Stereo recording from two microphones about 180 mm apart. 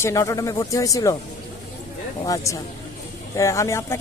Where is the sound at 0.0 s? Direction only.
20° left (ahead or behind).